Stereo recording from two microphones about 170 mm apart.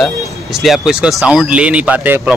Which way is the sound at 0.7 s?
5° right (ahead or behind).